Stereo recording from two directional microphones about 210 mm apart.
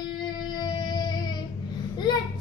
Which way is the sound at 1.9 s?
20° left (ahead or behind).